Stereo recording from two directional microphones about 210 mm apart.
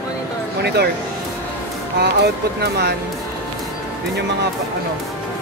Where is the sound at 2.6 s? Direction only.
50° right (ahead or behind).